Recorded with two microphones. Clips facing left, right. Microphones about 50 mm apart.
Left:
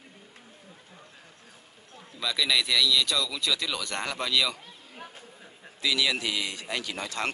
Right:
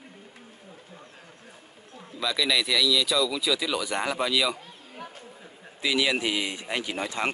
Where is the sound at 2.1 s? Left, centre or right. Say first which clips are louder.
Right 1 dB; centre.